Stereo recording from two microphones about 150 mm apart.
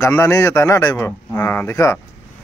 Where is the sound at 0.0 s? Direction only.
20° left (ahead or behind).